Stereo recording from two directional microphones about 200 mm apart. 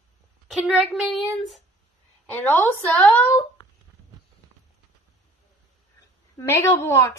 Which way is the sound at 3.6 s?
20° left (ahead or behind).